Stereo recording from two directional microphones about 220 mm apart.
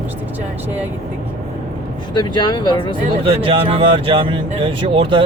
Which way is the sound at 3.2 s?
25° right (ahead or behind).